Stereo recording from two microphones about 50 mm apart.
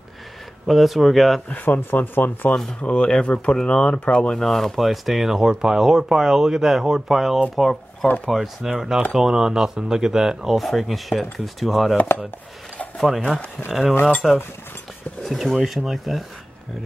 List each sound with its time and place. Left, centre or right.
0.7 s speech: centre
1.5 s speech: left
2.8 s speech: centre
4.4 s speech: centre
13.7 s speech: centre